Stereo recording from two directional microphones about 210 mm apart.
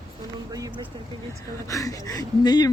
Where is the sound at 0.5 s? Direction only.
15° right (ahead or behind).